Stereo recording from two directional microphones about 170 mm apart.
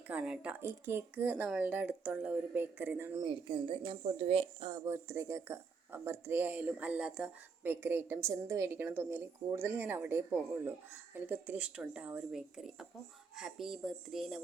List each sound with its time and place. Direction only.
0.1 s speech: 5° right (ahead or behind)
3.2 s speech: 30° right (ahead or behind)
4.7 s speech: 15° right (ahead or behind); by 14.4 s centre (ahead or behind)